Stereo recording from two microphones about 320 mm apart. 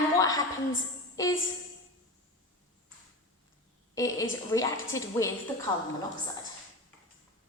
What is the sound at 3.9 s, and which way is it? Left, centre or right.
A woman's voice, centre.